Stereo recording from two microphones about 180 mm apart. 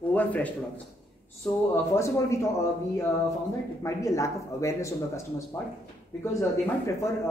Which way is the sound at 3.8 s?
15° left (ahead or behind).